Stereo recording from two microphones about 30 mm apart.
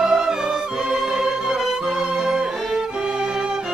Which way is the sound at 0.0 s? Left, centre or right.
Right.